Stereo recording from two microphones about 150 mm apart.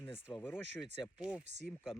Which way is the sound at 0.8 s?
5° right (ahead or behind).